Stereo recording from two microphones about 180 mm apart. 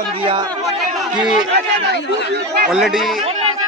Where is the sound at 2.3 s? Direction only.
60° right (ahead or behind).